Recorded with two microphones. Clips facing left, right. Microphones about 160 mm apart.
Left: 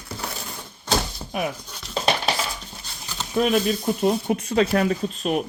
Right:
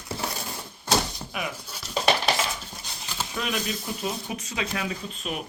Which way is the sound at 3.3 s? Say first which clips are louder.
Left 11 dB; 45° left (ahead or behind).